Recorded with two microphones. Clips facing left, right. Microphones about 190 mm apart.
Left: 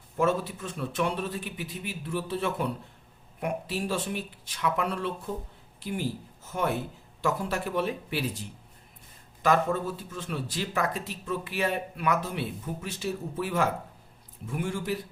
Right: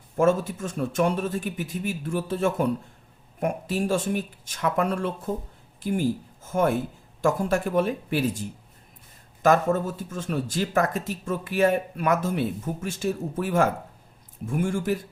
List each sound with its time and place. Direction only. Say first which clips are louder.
0.2 s speech: right 5 dB; 45° right (ahead or behind)